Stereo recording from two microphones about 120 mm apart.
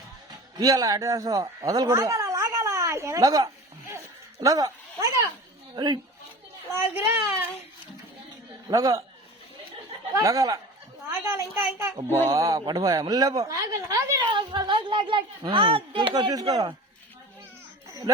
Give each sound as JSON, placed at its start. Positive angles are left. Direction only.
{"t": 0.5, "sound": "speech", "side_deg": -30}
{"t": 4.4, "sound": "a sound", "side_deg": -30}
{"t": 5.7, "sound": "speech", "side_deg": -35}
{"t": 6.7, "sound": "a child's voice", "side_deg": -20}
{"t": 8.6, "sound": "a child's voice", "side_deg": -30}
{"t": 10.2, "sound": "a child's voice", "side_deg": -25}
{"t": 12.0, "sound": "speech", "side_deg": 20}
{"t": 12.3, "sound": "speech", "side_deg": -30}
{"t": 14.3, "sound": "speech", "side_deg": -40}